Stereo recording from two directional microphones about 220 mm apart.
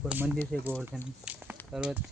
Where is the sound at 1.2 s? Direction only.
5° right (ahead or behind).